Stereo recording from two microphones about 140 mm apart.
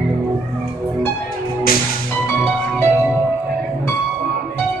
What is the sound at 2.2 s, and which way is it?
Music, 15° left (ahead or behind).